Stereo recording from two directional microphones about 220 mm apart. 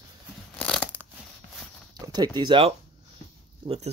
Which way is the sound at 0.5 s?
5° left (ahead or behind).